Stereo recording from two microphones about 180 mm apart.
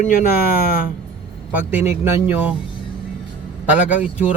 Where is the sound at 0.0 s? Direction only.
50° left (ahead or behind).